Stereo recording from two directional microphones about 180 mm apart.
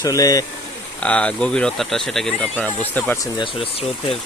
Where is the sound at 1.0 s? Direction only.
5° left (ahead or behind).